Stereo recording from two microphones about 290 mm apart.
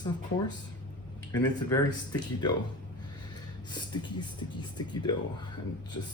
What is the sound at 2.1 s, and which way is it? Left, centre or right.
Speech, centre.